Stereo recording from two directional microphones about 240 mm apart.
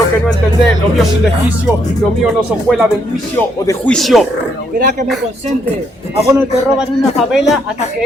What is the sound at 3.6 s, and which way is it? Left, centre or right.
Speech, centre.